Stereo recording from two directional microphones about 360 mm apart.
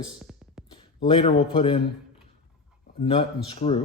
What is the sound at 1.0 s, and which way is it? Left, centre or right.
Speech, centre.